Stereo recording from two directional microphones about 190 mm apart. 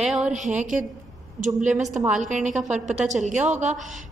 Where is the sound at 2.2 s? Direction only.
40° right (ahead or behind).